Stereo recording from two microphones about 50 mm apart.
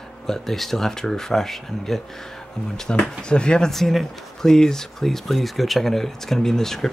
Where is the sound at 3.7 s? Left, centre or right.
Centre.